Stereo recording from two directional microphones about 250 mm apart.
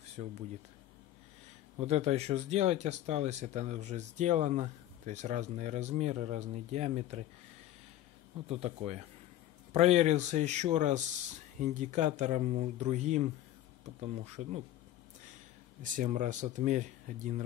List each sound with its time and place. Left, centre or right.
0.2 s speech: right
1.8 s speech: right
8.5 s speech: right
15.8 s speech: right